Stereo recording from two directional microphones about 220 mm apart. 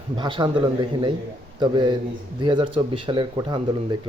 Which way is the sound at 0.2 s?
20° right (ahead or behind).